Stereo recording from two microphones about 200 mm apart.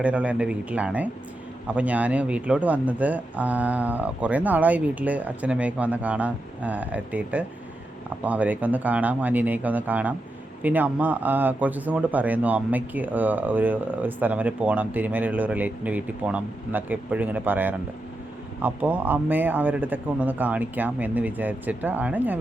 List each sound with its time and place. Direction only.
0.0 s speech: 5° right (ahead or behind)